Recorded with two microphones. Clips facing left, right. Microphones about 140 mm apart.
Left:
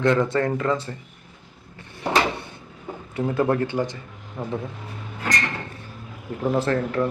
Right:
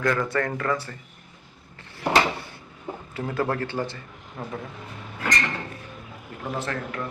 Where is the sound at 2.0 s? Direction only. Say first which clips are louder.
Even; 20° left (ahead or behind).